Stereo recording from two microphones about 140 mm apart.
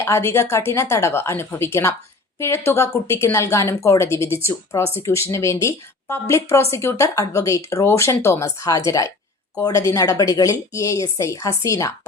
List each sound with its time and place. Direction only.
0.0 s a woman's voice: 20° left (ahead or behind)